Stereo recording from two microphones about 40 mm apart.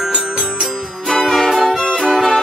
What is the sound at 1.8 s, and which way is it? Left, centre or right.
Music, left.